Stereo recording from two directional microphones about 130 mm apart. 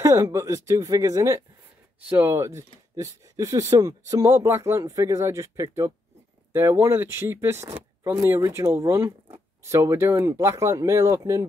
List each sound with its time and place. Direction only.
0.0 s speech: 20° right (ahead or behind)